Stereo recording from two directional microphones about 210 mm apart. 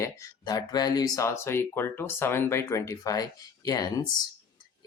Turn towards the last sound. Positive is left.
turn(degrees=20)  # may be behind; listen again after turning